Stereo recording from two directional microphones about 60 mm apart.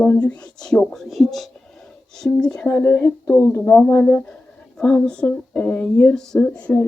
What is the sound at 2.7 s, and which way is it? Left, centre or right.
Speech, left.